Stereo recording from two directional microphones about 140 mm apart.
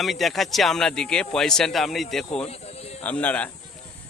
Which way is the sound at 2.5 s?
50° left (ahead or behind).